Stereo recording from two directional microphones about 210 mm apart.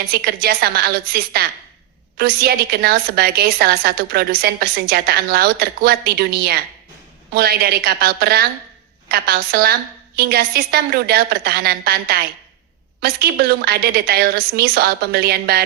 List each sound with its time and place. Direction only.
0.1 s a woman's voice: 50° right (ahead or behind)